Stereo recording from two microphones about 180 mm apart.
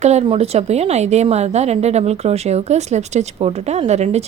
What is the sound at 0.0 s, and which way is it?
A woman's voice, 35° right (ahead or behind).